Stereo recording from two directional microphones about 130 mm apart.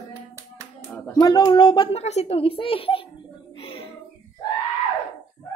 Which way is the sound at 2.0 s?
55° left (ahead or behind).